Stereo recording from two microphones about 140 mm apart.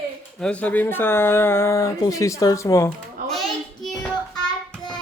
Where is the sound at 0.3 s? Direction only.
5° left (ahead or behind); by 2.9 s 20° left (ahead or behind).